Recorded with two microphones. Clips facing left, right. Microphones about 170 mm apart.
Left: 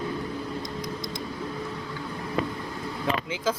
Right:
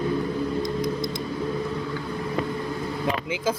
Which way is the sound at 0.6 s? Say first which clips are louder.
Right 8 dB; 50° right (ahead or behind).